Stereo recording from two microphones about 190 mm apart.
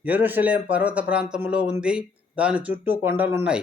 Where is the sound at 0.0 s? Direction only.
10° right (ahead or behind).